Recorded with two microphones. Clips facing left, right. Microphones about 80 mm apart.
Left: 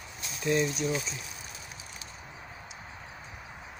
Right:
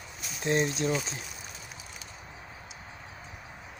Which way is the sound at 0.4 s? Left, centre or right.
Right.